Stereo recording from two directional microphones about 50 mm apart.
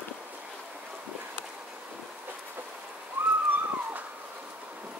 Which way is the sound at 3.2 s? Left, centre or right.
Right.